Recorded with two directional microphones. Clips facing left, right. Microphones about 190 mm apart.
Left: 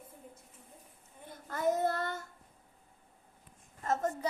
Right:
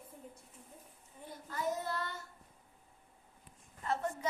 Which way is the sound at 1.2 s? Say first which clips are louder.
Left 6 dB; 50° left (ahead or behind).